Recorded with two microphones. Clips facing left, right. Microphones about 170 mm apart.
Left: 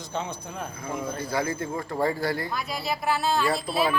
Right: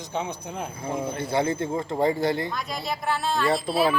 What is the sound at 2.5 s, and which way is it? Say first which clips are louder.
Speech: even; 5° left (ahead or behind).